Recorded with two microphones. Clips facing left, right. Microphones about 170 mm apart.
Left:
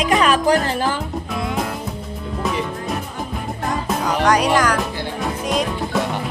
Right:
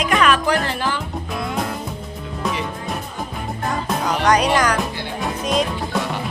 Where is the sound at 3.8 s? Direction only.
5° left (ahead or behind).